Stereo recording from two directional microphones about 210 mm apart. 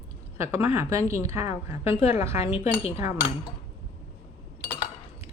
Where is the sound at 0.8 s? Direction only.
15° right (ahead or behind).